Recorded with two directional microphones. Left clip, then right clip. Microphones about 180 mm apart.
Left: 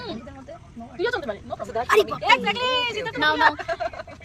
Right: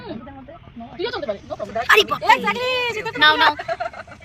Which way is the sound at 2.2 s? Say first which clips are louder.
Right 3 dB; 60° right (ahead or behind).